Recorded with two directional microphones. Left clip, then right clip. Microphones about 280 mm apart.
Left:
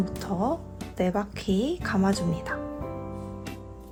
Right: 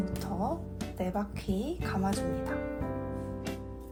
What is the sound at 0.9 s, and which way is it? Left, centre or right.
Speech, left.